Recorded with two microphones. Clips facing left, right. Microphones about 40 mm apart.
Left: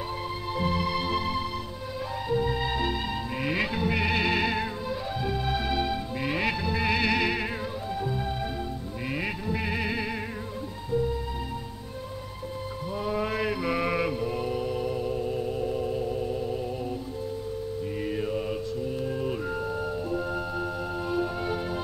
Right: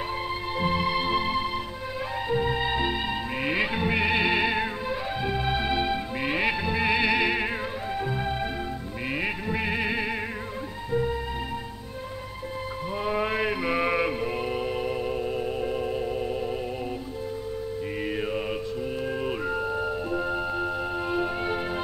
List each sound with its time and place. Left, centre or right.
0.5 s music: right
10.9 s music: right
12.9 s mantra: right
14.2 s music: right
18.0 s mantra: right
19.0 s music: right
19.4 s music: right